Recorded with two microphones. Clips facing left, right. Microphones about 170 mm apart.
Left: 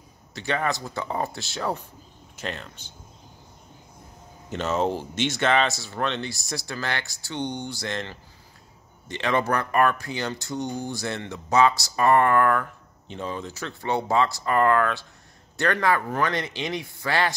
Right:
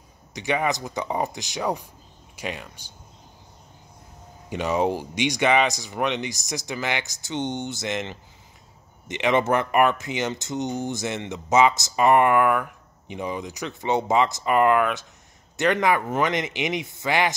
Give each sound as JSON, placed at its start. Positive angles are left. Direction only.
{"t": 0.3, "sound": "speech", "side_deg": -15}
{"t": 4.5, "sound": "speech", "side_deg": -10}